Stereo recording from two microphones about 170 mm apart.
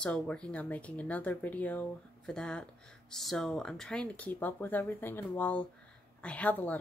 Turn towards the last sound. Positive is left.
turn(degrees=10)  # may be behind; listen again after turning